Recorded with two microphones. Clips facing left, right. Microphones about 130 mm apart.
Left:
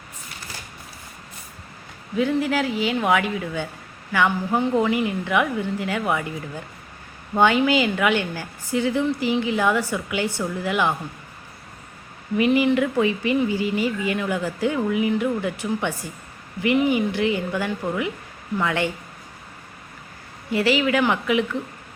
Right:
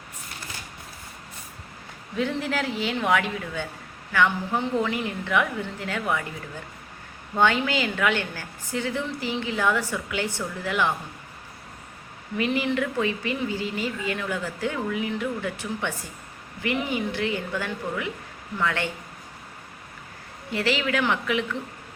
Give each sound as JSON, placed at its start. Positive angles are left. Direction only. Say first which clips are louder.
{"t": 2.1, "sound": "a woman's voice", "louder": "left 5 dB", "side_deg": 5}
{"t": 7.3, "sound": "a woman's voice", "louder": "left 5 dB", "side_deg": 15}
{"t": 12.4, "sound": "a woman's voice", "louder": "left 6 dB", "side_deg": 15}
{"t": 20.5, "sound": "a woman's voice", "louder": "left 5 dB", "side_deg": 10}